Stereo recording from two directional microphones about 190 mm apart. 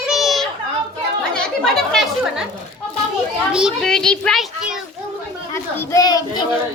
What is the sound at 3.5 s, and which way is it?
A child's voice, centre (ahead or behind).